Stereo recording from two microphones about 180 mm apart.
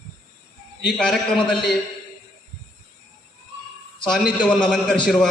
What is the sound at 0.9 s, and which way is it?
Speech, 5° left (ahead or behind).